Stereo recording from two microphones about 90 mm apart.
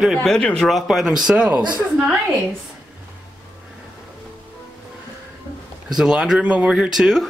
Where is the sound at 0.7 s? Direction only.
Centre (ahead or behind).